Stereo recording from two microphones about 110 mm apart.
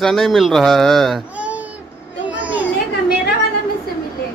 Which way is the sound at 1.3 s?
10° right (ahead or behind).